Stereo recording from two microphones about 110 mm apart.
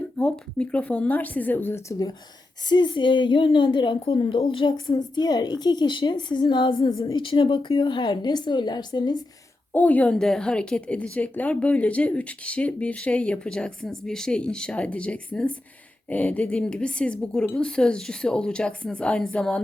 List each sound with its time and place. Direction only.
0.2 s a woman's voice: 10° left (ahead or behind)
2.6 s a woman's voice: 45° left (ahead or behind)
9.7 s a woman's voice: 15° left (ahead or behind)